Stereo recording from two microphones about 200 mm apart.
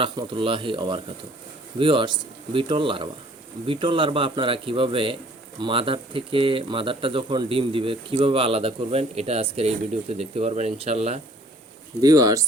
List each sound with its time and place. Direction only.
0.0 s speech: 25° right (ahead or behind)
11.9 s speech: 20° right (ahead or behind)